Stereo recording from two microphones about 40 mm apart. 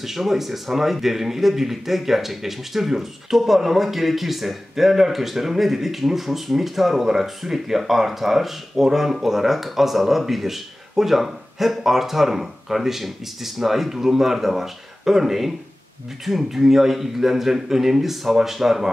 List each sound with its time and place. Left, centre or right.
0.0 s speech: centre